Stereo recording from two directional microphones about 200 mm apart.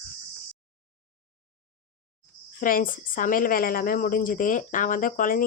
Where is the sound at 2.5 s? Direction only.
45° left (ahead or behind).